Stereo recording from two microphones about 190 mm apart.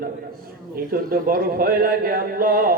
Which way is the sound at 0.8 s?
50° right (ahead or behind).